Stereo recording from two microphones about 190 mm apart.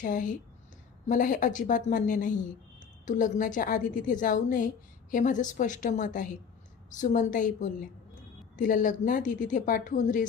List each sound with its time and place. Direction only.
0.0 s a woman's voice: 45° left (ahead or behind)